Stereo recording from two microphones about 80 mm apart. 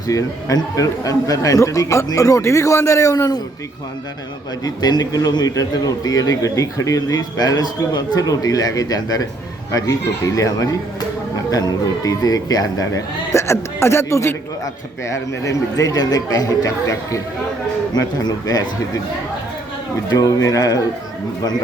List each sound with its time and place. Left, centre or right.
0.1 s a man's voice: left
4.6 s a man's voice: left
12.0 s a man's voice: left
17.9 s a man's voice: left
20.1 s a man's voice: left